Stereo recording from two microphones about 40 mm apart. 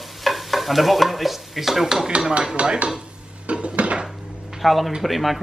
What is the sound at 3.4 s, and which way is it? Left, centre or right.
Dishes, right.